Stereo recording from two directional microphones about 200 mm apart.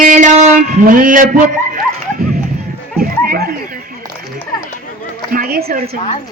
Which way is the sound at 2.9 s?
50° right (ahead or behind).